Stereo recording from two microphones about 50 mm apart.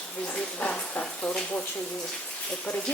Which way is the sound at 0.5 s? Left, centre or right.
Left.